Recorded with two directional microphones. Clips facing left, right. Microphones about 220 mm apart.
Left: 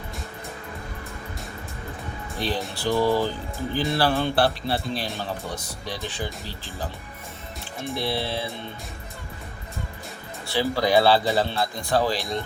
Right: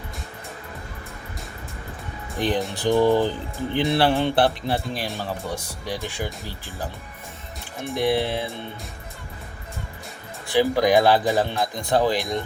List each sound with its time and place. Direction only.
2.3 s speech: 15° right (ahead or behind)
10.4 s speech: 15° right (ahead or behind)